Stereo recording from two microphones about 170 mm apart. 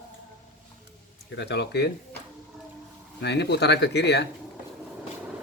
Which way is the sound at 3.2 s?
90° left.